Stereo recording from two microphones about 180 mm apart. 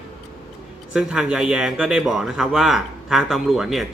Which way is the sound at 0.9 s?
5° right (ahead or behind).